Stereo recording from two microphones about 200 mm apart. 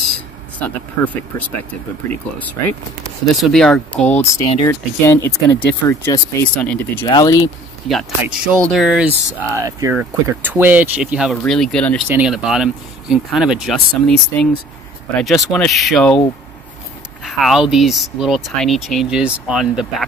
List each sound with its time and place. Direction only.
0.6 s speech: 5° left (ahead or behind)
3.3 s speech: centre (ahead or behind)
7.1 s speech: 20° left (ahead or behind)
7.9 s speech: centre (ahead or behind)
17.2 s speech: centre (ahead or behind)